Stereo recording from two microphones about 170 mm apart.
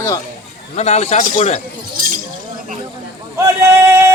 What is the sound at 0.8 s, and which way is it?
Speech, 40° left (ahead or behind).